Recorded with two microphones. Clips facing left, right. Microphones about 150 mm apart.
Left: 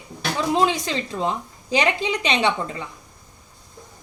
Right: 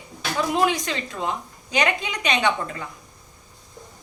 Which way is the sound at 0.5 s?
25° left (ahead or behind).